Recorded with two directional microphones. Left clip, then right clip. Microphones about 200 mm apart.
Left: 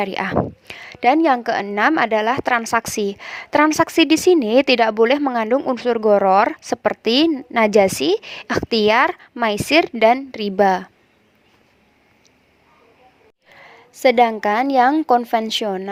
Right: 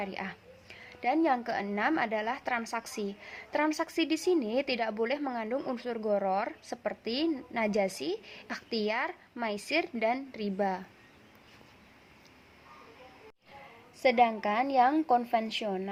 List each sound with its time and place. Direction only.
0.0 s a woman's voice: 55° left (ahead or behind)
14.0 s a woman's voice: 45° left (ahead or behind)